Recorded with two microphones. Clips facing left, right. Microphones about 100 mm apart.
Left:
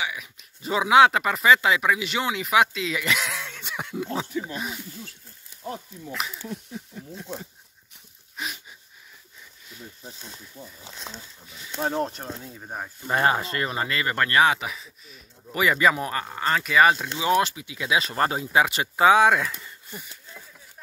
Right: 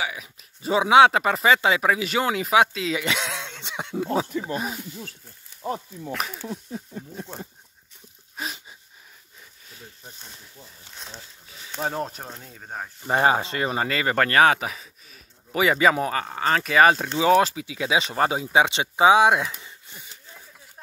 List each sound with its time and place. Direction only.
0.0 s speech: 35° right (ahead or behind)
8.4 s a sound: 35° right (ahead or behind)
10.6 s speech: 15° left (ahead or behind)
11.8 s speech: centre (ahead or behind)
13.0 s speech: 25° right (ahead or behind)
14.4 s speech: 40° right (ahead or behind)
15.5 s speech: 25° right (ahead or behind)
18.1 s speech: 10° right (ahead or behind)
18.5 s speech: 20° right (ahead or behind)